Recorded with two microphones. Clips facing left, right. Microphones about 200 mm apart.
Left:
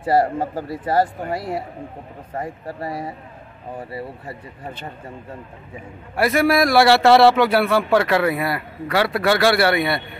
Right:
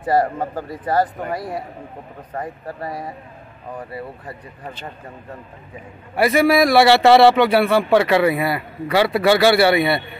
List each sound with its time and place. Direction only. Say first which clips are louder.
0.0 s speech: even; 30° left (ahead or behind)
6.1 s a man's voice: right 2 dB; centre (ahead or behind)